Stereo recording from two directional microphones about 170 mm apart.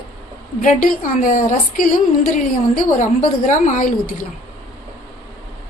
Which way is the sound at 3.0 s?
45° left (ahead or behind).